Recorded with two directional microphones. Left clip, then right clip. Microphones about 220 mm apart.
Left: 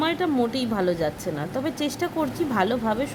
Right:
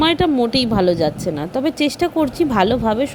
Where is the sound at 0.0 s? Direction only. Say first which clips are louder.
Right 8 dB; 30° right (ahead or behind).